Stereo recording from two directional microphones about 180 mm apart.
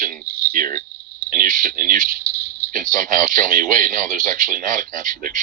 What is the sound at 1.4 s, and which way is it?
Speech, 50° right (ahead or behind).